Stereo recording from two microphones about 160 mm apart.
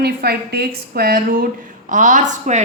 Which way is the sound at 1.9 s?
50° right (ahead or behind).